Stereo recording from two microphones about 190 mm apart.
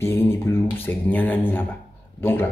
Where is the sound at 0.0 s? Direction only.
15° left (ahead or behind).